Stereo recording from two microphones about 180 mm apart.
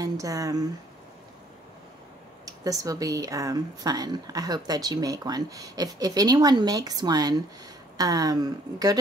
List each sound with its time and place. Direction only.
0.0 s speech: 20° right (ahead or behind)
2.4 s speech: 20° right (ahead or behind)